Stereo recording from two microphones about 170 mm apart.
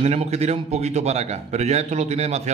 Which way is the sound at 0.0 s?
40° right (ahead or behind).